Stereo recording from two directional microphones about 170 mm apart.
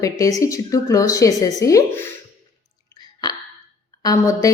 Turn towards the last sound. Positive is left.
turn(degrees=20)  # may be behind; listen again after turning